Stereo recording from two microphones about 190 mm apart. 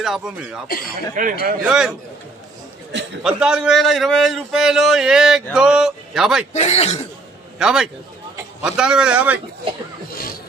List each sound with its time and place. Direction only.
0.0 s a man's voice: 5° right (ahead or behind)
1.1 s a man's voice: 45° right (ahead or behind)
1.6 s a man's voice: 5° right (ahead or behind)
3.2 s a man's voice: 5° right (ahead or behind)
6.5 s speech: 35° left (ahead or behind)
7.6 s a man's voice: 5° right (ahead or behind)